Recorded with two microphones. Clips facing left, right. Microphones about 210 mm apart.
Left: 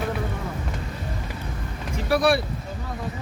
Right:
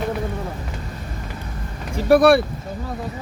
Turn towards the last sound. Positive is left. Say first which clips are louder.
# right 7 dB
turn(degrees=-55)  # may be behind; listen again after turning